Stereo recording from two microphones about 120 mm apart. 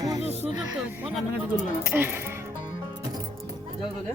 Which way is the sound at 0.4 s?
5° right (ahead or behind).